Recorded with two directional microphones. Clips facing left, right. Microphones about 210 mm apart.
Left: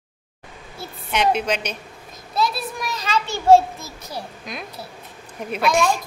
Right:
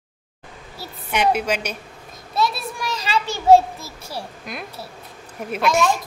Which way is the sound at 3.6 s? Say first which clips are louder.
Even; 30° right (ahead or behind).